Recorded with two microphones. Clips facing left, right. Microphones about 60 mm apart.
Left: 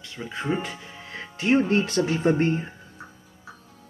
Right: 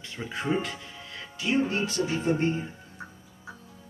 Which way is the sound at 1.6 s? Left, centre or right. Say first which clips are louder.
Left 5 dB; left.